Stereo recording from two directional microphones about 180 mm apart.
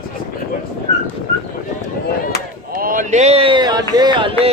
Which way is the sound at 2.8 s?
45° right (ahead or behind).